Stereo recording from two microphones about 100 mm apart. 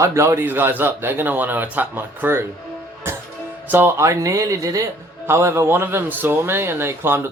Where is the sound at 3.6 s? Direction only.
25° right (ahead or behind).